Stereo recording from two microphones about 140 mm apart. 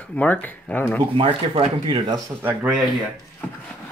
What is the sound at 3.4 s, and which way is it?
Speech, 10° left (ahead or behind).